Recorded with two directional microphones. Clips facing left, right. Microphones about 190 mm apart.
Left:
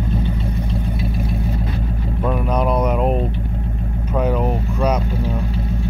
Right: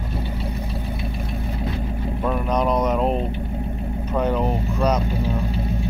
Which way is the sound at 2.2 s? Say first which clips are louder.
Left 2 dB; 5° left (ahead or behind).